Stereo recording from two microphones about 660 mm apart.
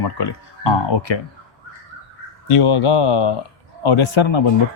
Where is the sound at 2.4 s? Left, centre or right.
Left.